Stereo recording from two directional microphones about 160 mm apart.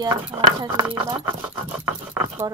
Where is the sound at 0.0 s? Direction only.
25° right (ahead or behind).